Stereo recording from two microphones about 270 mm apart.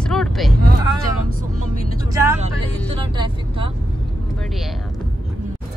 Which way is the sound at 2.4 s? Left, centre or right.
Right.